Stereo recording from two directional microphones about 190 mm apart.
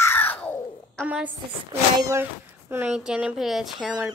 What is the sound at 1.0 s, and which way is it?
A woman's voice, 10° right (ahead or behind).